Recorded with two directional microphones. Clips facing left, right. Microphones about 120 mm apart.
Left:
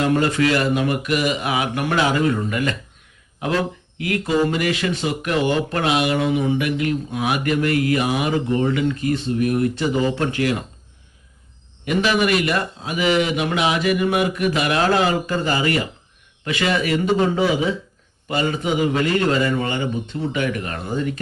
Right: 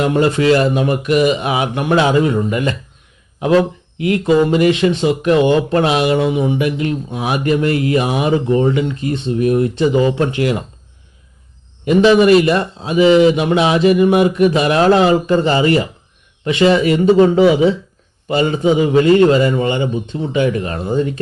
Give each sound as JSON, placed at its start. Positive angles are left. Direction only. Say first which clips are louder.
{"t": 0.0, "sound": "speech", "louder": "right 4 dB", "side_deg": -20}
{"t": 11.9, "sound": "speech", "louder": "right 9 dB", "side_deg": -25}
{"t": 18.3, "sound": "speech", "louder": "right 7 dB", "side_deg": -25}